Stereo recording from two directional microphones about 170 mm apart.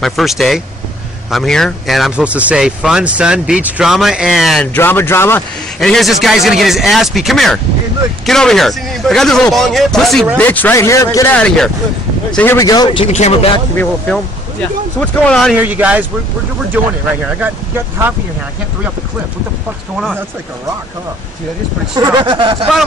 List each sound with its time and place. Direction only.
0.0 s speech: centre (ahead or behind)
4.7 s speech: 10° left (ahead or behind)
5.8 s speech: centre (ahead or behind); by 11.1 s 15° left (ahead or behind)
11.3 s speech: 5° left (ahead or behind)
12.4 s speech: 15° left (ahead or behind)
13.0 s speech: 40° left (ahead or behind)
13.7 s speech: 5° left (ahead or behind)
15.6 s speech: 10° right (ahead or behind)
21.9 s speech: 25° right (ahead or behind)